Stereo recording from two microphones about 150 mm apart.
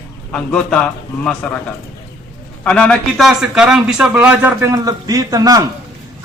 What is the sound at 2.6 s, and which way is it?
Speech, 5° left (ahead or behind).